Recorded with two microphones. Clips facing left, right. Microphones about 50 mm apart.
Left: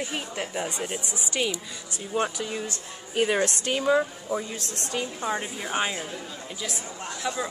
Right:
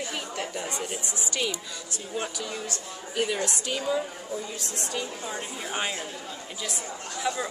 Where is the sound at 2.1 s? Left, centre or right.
Left.